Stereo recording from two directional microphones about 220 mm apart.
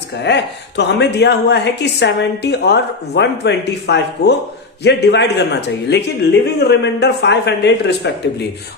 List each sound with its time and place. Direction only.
0.2 s a woman's voice: 50° left (ahead or behind)